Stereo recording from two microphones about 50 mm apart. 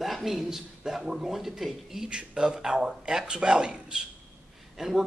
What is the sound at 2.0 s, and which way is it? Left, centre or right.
Speech, centre.